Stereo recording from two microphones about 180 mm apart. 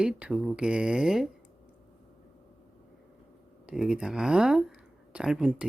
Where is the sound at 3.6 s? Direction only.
5° right (ahead or behind).